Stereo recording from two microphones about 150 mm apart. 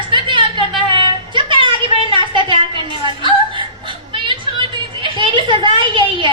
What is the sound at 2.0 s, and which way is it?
Chuckle, 35° right (ahead or behind).